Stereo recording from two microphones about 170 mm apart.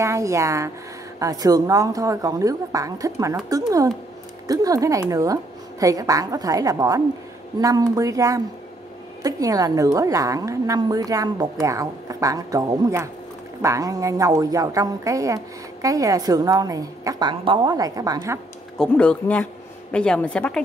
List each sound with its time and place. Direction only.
0.0 s a woman's voice: 20° right (ahead or behind)
18.8 s speech: 5° left (ahead or behind)